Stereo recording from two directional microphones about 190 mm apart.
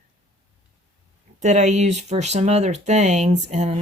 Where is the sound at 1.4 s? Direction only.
40° right (ahead or behind).